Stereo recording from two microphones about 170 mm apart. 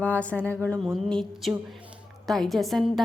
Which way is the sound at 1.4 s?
Centre (ahead or behind).